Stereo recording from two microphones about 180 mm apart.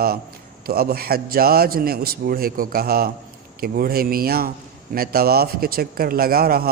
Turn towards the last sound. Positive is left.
turn(degrees=-55)  # may be behind; listen again after turning